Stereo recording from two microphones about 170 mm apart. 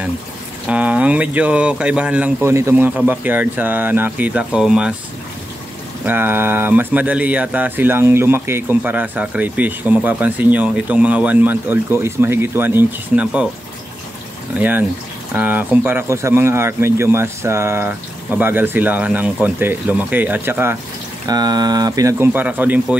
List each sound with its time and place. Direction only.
0.7 s speech: 5° right (ahead or behind)
6.0 s speech: 10° right (ahead or behind)
14.6 s speech: 10° right (ahead or behind)
21.3 s speech: 25° right (ahead or behind)